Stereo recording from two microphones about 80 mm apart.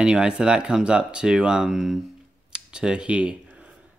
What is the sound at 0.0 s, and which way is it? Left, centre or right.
Speech, centre.